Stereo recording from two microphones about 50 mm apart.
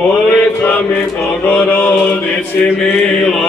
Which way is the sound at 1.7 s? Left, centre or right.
Left.